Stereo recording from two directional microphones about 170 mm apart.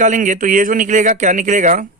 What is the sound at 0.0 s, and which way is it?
Speech, 50° right (ahead or behind).